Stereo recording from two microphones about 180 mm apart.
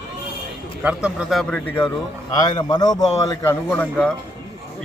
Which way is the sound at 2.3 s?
25° left (ahead or behind).